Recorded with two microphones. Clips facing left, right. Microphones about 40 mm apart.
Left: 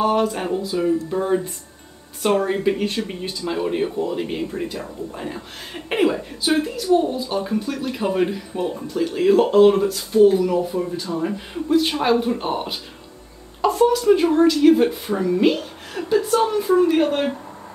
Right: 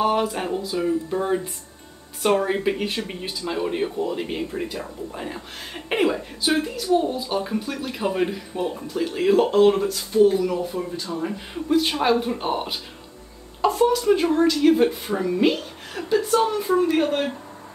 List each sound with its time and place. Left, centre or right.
0.0 s speech: centre